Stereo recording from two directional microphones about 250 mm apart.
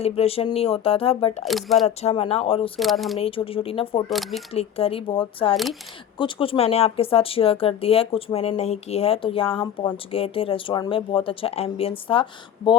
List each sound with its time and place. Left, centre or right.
0.0 s speech: left
1.5 s speech: centre
2.0 s speech: left
2.7 s speech: centre
3.2 s speech: left
4.1 s speech: centre
4.5 s speech: left